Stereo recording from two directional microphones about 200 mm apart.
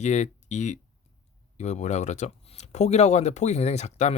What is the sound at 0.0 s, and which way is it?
Speech, 35° left (ahead or behind).